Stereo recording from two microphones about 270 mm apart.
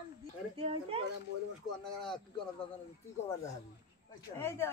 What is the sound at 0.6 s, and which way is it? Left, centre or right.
Speech, centre.